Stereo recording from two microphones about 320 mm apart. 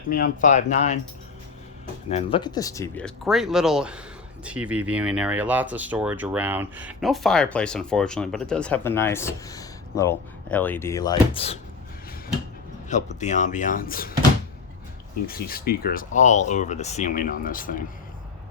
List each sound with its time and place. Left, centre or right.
0.1 s speech: left
2.0 s speech: centre
12.9 s speech: left
15.3 s speech: left